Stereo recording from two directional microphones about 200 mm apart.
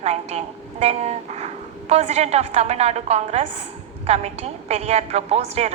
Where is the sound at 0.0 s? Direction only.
35° right (ahead or behind).